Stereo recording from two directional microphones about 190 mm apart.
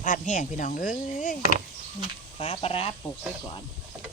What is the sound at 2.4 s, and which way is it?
Speech, 30° left (ahead or behind).